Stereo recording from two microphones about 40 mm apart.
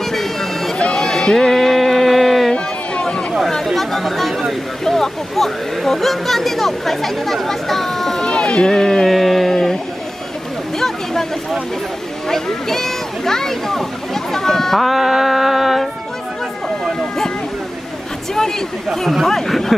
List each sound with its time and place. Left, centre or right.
0.1 s a sound: centre
2.5 s a sound: left
3.6 s chatter: centre
4.8 s speech: centre
8.2 s speech: left
9.0 s a sound: centre
12.3 s speech: centre
14.8 s music: centre
18.9 s speech: centre
19.2 s speech: centre